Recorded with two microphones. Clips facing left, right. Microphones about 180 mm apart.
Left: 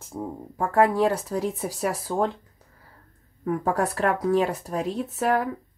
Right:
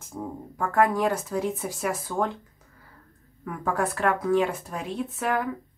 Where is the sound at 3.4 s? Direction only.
35° left (ahead or behind).